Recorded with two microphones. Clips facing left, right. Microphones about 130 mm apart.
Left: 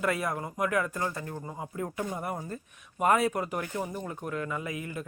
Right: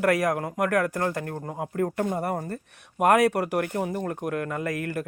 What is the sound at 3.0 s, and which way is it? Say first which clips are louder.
A man's voice: right 5 dB; 70° right (ahead or behind).